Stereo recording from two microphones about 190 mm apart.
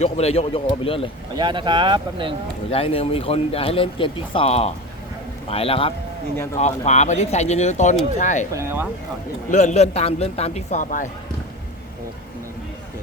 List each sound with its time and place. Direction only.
0.0 s speech: 35° left (ahead or behind)
1.4 s speech: 25° right (ahead or behind)
2.6 s speech: 30° left (ahead or behind)
6.3 s speech: 15° left (ahead or behind)
6.6 s speech: 35° left (ahead or behind)
8.5 s speech: 15° right (ahead or behind)
9.5 s speech: 40° left (ahead or behind)